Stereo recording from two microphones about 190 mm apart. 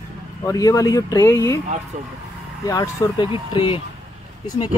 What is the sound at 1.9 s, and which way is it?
Speech, 40° right (ahead or behind).